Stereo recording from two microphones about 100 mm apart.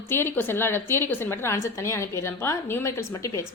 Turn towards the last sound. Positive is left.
turn(degrees=30)  # may be behind; listen again after turning